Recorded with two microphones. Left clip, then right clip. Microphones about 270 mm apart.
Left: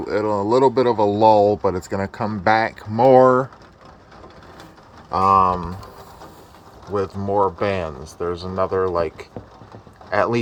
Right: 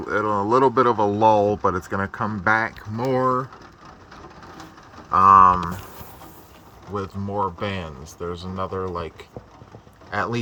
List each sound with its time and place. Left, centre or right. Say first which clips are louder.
0.0 s speech: left 1 dB; centre
5.1 s speech: right 3 dB; right
6.9 s speech: left 7 dB; centre